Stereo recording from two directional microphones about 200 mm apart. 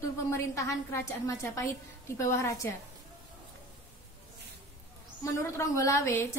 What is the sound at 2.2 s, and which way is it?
Speech, 15° left (ahead or behind).